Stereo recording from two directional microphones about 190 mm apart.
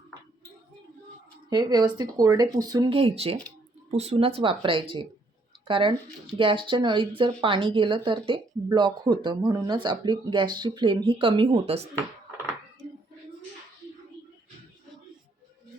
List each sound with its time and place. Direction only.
1.5 s speech: 20° right (ahead or behind)